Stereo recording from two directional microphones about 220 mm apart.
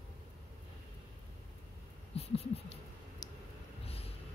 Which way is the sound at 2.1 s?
30° left (ahead or behind).